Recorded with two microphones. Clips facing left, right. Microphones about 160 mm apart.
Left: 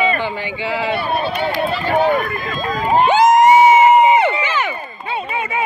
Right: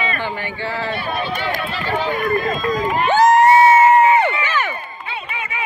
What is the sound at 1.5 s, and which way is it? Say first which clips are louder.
Speech: left 6 dB; 45° left (ahead or behind).